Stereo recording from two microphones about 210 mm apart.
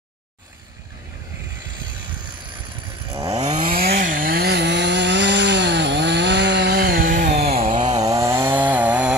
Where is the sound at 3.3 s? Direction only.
30° right (ahead or behind).